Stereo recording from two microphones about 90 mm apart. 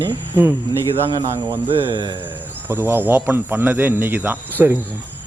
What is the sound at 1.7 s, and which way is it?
Speech, 85° right.